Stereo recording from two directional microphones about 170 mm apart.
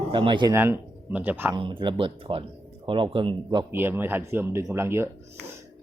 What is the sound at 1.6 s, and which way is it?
Speech, 30° right (ahead or behind).